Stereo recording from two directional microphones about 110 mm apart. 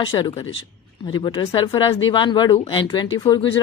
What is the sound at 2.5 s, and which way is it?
Speech, 55° left (ahead or behind).